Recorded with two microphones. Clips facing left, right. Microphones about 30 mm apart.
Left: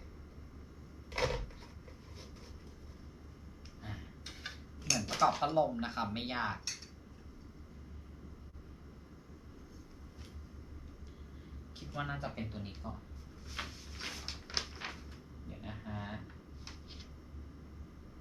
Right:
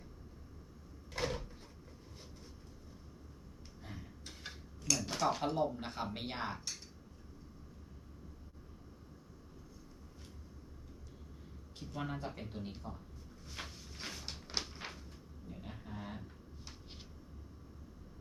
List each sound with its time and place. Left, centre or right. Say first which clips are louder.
1.1 s cupboard open or close: left 3 dB; left
3.8 s tick-tock: left 2 dB; left
5.0 s speech: left 6 dB; centre
11.8 s speech: left 2 dB; centre
13.7 s a sound: left 2 dB; centre